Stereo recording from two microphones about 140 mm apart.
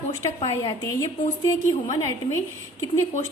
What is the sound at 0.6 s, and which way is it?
Speech, 30° left (ahead or behind).